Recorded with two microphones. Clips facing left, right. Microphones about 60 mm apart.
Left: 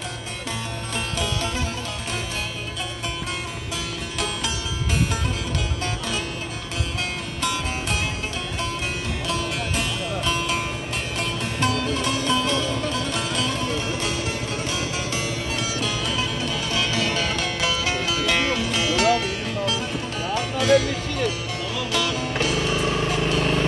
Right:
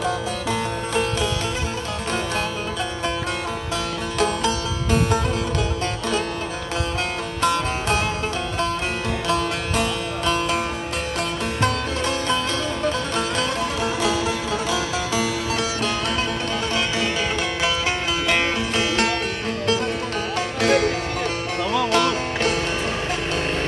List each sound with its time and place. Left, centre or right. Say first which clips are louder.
4.2 s music: right 7 dB; right
7.4 s music: right 6 dB; right
9.3 s music: right 4 dB; right
11.6 s music: even; right
16.7 s music: left 1 dB; right
20.3 s music: left 1 dB; right